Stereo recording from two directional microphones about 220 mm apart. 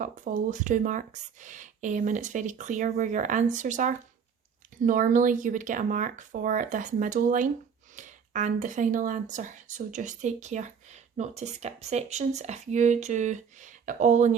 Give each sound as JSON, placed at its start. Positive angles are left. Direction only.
{"t": 0.0, "sound": "speech", "side_deg": -35}